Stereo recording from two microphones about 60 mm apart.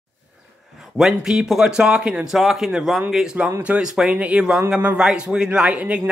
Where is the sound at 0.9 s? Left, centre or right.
Centre.